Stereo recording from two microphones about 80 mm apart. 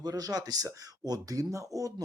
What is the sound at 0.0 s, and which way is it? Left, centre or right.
Speech, right.